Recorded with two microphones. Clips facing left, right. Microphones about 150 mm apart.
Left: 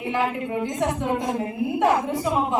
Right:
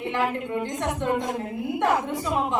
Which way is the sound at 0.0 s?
5° left (ahead or behind).